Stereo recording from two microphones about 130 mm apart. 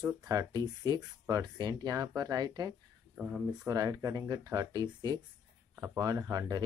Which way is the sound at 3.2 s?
10° right (ahead or behind).